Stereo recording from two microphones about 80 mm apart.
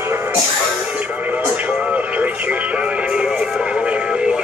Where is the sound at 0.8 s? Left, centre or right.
Centre.